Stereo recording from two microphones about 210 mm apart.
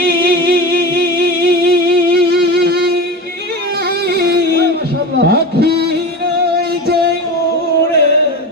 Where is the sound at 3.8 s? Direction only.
50° right (ahead or behind).